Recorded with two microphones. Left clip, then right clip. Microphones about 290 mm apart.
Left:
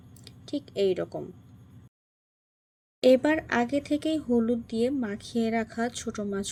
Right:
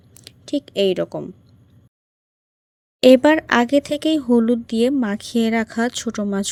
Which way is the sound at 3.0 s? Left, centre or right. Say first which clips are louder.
Right 9 dB; right.